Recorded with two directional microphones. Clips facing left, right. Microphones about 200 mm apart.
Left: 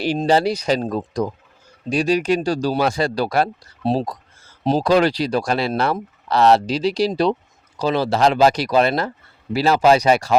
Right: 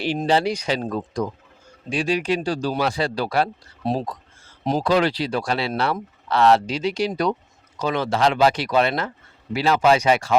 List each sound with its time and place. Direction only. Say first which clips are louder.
0.3 s speech: left 4 dB; 40° left (ahead or behind)
3.8 s a sound: left 4 dB; 35° left (ahead or behind)
4.9 s speech: left 3 dB; 40° left (ahead or behind)